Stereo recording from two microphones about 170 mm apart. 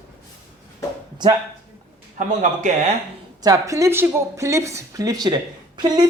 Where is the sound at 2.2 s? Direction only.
45° right (ahead or behind).